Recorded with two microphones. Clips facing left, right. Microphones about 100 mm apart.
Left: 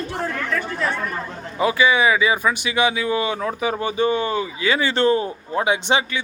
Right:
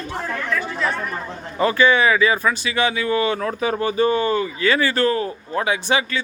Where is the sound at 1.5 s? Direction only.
10° left (ahead or behind).